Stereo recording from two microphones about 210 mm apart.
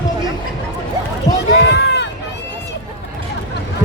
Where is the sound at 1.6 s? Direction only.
55° left (ahead or behind).